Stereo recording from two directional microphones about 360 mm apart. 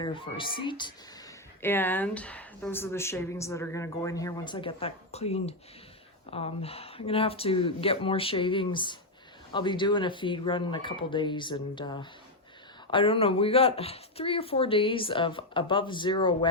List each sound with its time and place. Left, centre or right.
0.0 s speech: centre